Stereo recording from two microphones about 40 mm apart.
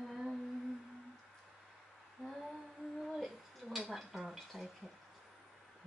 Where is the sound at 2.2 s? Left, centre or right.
Centre.